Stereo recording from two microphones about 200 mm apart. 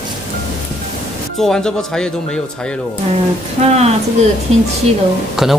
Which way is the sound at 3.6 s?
35° right (ahead or behind).